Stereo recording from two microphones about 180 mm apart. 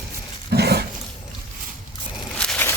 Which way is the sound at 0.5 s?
65° right (ahead or behind).